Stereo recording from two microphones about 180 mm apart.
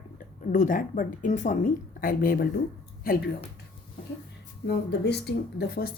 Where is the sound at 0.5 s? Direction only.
45° left (ahead or behind).